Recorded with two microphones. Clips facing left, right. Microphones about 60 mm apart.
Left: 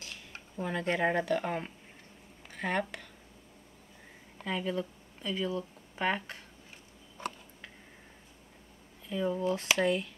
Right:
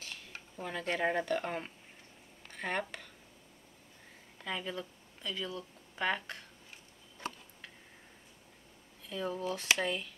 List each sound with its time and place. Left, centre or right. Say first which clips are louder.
0.0 s speech: left 1 dB; centre
4.5 s speech: left 5 dB; centre
5.2 s speech: left 6 dB; left
9.1 s speech: left 5 dB; centre